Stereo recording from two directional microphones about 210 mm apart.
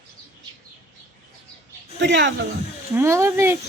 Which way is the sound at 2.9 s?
10° right (ahead or behind).